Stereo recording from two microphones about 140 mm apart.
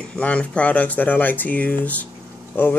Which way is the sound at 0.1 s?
10° left (ahead or behind).